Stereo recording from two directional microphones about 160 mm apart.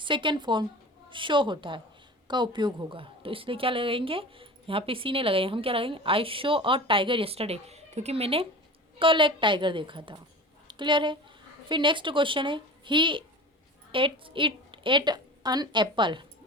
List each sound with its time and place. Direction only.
0.0 s a woman's voice: 30° right (ahead or behind)